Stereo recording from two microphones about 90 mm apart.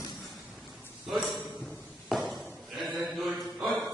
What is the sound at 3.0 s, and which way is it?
Mantra, 5° right (ahead or behind).